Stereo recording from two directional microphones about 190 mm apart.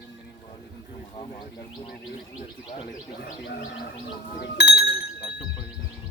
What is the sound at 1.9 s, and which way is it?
Chirp tone, 50° left (ahead or behind).